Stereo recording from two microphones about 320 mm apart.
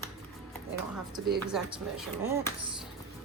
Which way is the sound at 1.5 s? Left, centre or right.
Centre.